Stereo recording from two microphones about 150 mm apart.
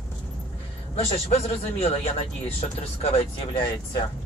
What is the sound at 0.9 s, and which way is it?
A man's voice, 40° left (ahead or behind).